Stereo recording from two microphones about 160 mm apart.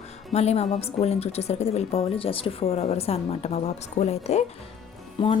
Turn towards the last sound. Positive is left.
turn(degrees=30)  # may be behind; listen again after turning